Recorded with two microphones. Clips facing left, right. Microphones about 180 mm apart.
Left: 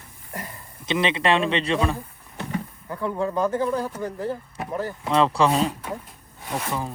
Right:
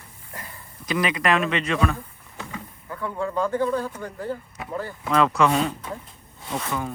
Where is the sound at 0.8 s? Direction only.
25° left (ahead or behind).